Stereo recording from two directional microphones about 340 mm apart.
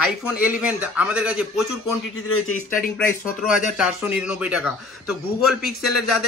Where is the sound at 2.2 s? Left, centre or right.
Left.